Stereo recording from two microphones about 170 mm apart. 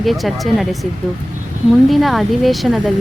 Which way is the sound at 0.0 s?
Centre (ahead or behind).